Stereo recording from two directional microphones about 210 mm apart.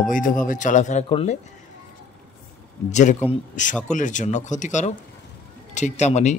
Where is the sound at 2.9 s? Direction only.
35° left (ahead or behind).